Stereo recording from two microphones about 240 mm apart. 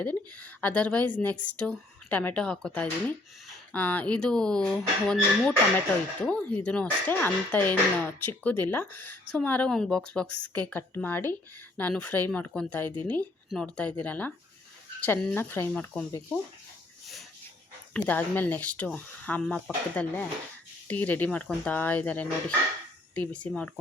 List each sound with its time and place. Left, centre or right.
0.0 s speech: centre
6.6 s speech: centre
10.2 s a woman's voice: left
10.7 s speech: centre
17.9 s speech: centre